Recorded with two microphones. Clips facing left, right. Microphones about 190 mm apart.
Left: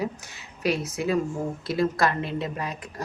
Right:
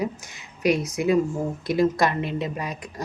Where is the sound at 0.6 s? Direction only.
15° right (ahead or behind).